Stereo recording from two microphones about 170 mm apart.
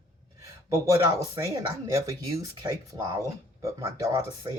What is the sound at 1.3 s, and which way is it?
Speech, 20° right (ahead or behind).